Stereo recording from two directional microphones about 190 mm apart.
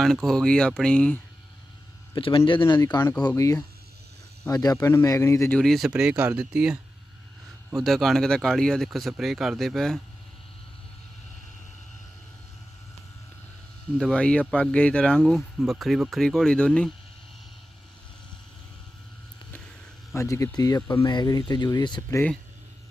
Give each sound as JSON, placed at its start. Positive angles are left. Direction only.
{"t": 0.0, "sound": "speech", "side_deg": 0}
{"t": 2.1, "sound": "speech", "side_deg": 30}
{"t": 14.0, "sound": "speech", "side_deg": 5}
{"t": 20.1, "sound": "speech", "side_deg": 15}